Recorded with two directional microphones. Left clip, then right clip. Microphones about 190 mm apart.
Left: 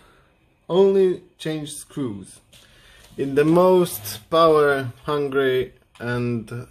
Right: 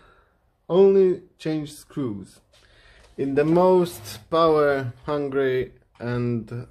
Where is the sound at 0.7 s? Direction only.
Centre (ahead or behind).